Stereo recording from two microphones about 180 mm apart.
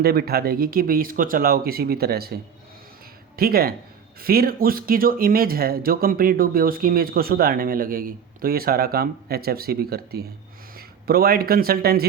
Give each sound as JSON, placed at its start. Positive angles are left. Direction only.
{"t": 0.0, "sound": "speech", "side_deg": -60}